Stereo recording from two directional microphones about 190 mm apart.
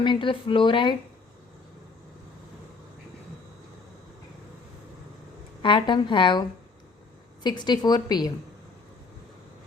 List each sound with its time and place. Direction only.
0.0 s a woman's voice: 25° left (ahead or behind)
5.6 s a woman's voice: 25° left (ahead or behind)
7.4 s a woman's voice: 25° left (ahead or behind)